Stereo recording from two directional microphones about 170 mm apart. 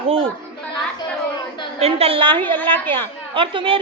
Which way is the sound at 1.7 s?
35° right (ahead or behind).